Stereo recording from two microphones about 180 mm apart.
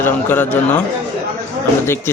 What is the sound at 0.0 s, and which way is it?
Speech, 10° left (ahead or behind).